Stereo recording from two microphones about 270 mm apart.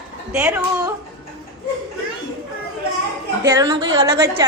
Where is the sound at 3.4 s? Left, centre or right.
Centre.